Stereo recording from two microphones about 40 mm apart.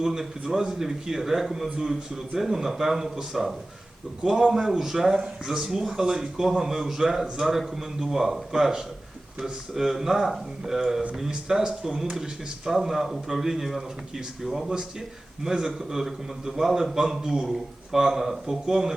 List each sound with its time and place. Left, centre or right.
0.0 s speech: centre
4.2 s speech: right